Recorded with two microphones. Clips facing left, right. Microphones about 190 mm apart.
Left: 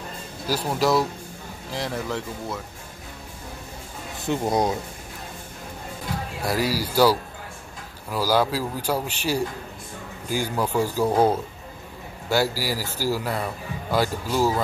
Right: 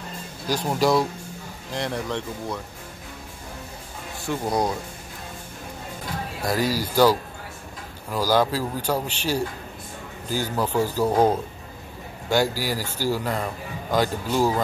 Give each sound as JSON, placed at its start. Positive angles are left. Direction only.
{"t": 0.5, "sound": "speech", "side_deg": 5}
{"t": 4.3, "sound": "speech", "side_deg": 20}
{"t": 6.4, "sound": "speech", "side_deg": 10}
{"t": 12.3, "sound": "speech", "side_deg": 5}